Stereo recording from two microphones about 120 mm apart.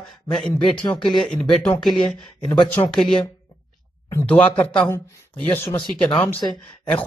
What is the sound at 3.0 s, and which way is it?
Speech, 5° left (ahead or behind).